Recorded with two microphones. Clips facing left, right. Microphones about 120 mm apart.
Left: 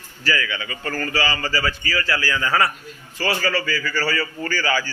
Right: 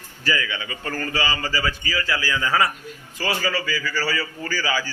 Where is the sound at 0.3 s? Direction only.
20° right (ahead or behind).